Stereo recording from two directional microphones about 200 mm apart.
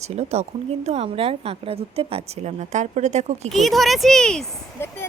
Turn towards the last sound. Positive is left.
turn(degrees=5)  # may be behind; listen again after turning